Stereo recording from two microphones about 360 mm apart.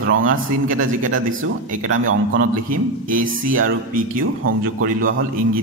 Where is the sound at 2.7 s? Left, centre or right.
Right.